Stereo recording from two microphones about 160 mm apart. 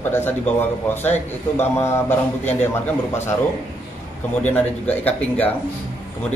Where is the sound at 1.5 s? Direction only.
15° left (ahead or behind).